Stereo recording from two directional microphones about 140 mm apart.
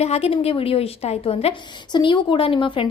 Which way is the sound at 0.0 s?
45° left (ahead or behind).